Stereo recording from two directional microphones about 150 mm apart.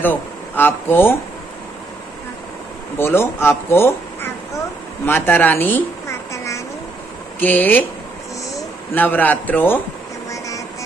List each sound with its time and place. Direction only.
0.0 s speech: 15° left (ahead or behind)
3.0 s speech: 15° left (ahead or behind)
5.0 s a sound: 15° left (ahead or behind)
7.3 s a man's voice: 10° left (ahead or behind)